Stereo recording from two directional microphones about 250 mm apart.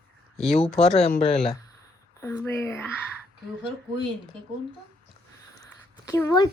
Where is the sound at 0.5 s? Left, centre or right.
Left.